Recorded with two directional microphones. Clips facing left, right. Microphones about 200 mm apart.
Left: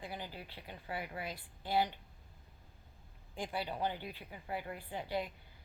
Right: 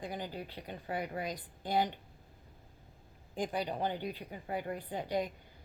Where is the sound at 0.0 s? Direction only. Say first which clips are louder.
Right 5 dB; 40° right (ahead or behind).